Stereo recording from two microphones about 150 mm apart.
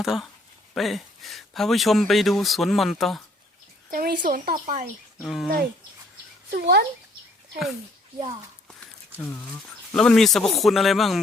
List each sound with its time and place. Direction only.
0.0 s speech: centre (ahead or behind)
3.9 s speech: 80° right; by 4.9 s 60° right (ahead or behind)
5.2 s speech: centre (ahead or behind)
6.5 s a child's voice: 90° right
9.1 s speech: 15° left (ahead or behind)
9.5 s speech: 5° left (ahead or behind)